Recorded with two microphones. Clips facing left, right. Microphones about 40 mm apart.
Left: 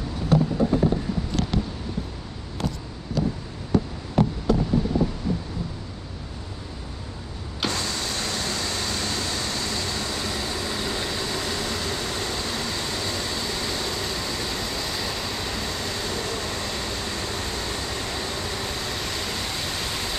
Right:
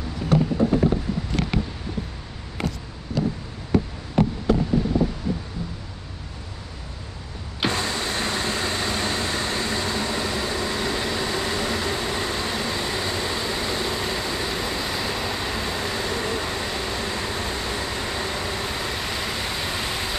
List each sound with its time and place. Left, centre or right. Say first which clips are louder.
7.6 s vehicle: right 3 dB; right